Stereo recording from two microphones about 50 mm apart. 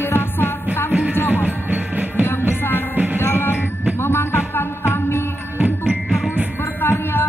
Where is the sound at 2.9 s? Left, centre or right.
Right.